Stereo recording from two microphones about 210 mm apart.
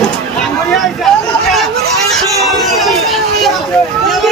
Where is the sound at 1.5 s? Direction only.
Centre (ahead or behind).